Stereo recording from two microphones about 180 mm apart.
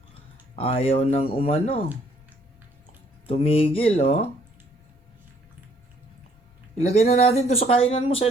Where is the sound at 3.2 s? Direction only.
30° left (ahead or behind).